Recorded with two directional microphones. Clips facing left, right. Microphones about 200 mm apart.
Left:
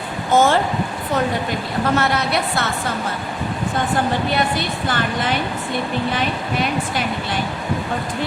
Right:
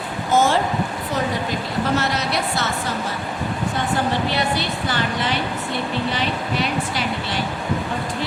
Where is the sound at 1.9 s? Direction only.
55° left (ahead or behind).